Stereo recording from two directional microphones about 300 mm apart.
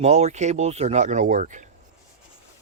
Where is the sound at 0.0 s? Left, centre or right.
Right.